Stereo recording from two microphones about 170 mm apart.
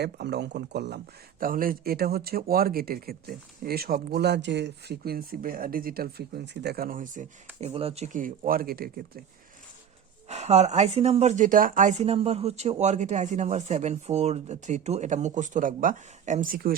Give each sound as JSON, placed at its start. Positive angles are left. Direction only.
{"t": 0.0, "sound": "speech", "side_deg": -75}
{"t": 7.6, "sound": "speech", "side_deg": -35}
{"t": 10.2, "sound": "speech", "side_deg": -40}